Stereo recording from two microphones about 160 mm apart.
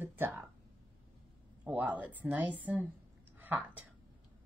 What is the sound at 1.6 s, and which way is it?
A woman's voice, 10° right (ahead or behind).